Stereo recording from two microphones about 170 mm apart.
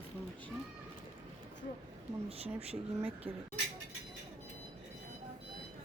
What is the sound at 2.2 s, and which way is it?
Speech, 35° right (ahead or behind).